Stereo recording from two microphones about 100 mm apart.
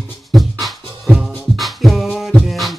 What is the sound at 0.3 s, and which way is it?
Music, centre (ahead or behind).